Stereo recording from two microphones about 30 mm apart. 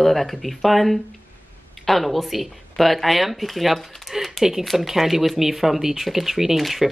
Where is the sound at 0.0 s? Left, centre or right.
Centre.